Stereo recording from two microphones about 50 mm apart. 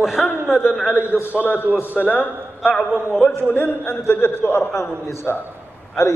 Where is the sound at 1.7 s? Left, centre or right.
Right.